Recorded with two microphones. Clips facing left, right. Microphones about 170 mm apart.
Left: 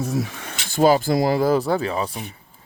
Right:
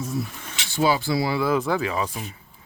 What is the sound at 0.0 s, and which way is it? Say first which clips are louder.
Speech: left 4 dB; 85° left.